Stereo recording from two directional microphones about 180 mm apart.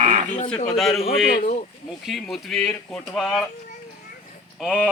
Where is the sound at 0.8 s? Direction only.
Centre (ahead or behind).